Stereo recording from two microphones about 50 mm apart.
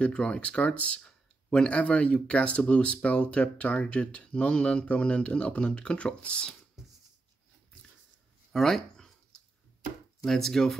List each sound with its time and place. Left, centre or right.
0.0 s speech: left
8.5 s a sound: centre
10.2 s speech: centre